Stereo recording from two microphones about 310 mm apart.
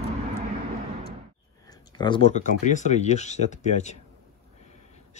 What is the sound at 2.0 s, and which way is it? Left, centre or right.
Speech, centre.